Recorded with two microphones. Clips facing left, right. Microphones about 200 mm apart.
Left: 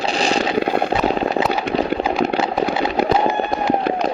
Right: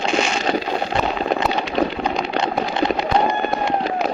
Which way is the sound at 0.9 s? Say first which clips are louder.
Left 3 dB; 5° left (ahead or behind).